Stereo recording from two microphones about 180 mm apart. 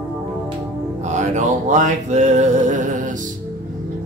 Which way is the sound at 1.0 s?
40° right (ahead or behind).